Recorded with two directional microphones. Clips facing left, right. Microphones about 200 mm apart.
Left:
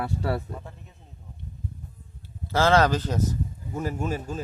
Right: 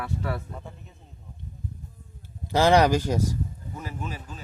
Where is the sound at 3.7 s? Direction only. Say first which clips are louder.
Left 8 dB; 45° left (ahead or behind).